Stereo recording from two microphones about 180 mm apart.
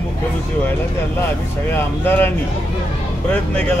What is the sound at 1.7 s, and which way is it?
Speech, 10° left (ahead or behind).